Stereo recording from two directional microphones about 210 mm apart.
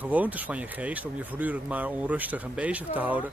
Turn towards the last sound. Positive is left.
turn(degrees=-5)  # may be behind; listen again after turning